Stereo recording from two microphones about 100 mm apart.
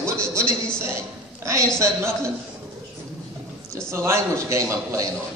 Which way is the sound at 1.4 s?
30° right (ahead or behind).